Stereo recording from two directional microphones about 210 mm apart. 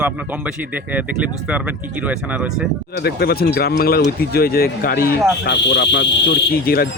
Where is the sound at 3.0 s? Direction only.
50° left (ahead or behind).